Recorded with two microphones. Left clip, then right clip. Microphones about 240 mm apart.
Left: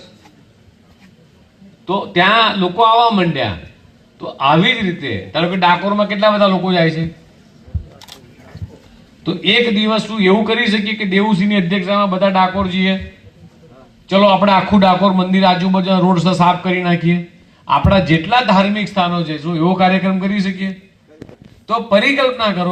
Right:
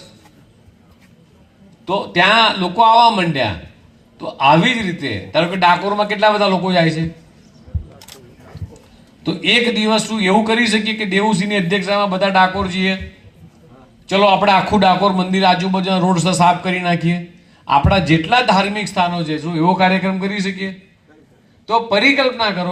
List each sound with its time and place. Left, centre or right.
1.9 s a man's voice: right
7.9 s camera: left
9.2 s a man's voice: right
14.1 s a man's voice: right
21.7 s a man's voice: right